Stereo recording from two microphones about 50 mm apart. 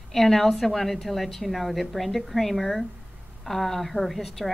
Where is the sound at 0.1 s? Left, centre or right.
Centre.